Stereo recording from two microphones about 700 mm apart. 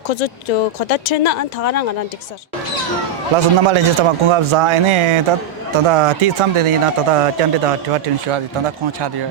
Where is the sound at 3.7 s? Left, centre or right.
Right.